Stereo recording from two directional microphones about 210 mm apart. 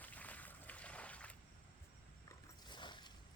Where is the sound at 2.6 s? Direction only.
20° left (ahead or behind).